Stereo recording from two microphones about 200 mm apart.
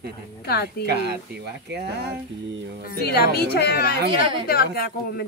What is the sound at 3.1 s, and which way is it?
Speech, 50° left (ahead or behind).